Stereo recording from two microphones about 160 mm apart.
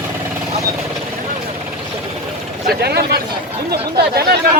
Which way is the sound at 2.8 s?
80° right.